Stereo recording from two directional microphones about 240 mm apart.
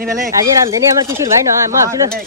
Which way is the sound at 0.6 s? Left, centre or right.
Centre.